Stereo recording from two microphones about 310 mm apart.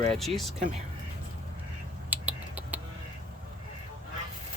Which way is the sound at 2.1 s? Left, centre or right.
Centre.